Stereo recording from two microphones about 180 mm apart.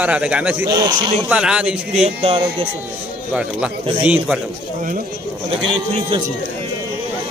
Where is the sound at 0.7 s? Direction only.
20° right (ahead or behind).